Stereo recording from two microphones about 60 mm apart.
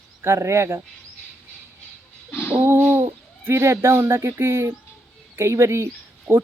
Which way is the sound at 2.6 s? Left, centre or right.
Right.